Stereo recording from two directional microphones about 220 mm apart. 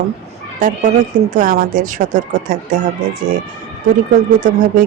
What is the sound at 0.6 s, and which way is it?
Speech, 40° right (ahead or behind).